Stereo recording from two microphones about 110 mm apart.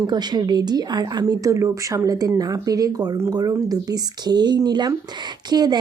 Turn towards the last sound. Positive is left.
turn(degrees=-40)  # may be behind; listen again after turning